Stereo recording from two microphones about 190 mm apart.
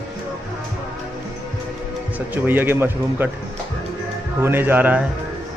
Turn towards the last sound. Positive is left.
turn(degrees=-10)  # may be behind; listen again after turning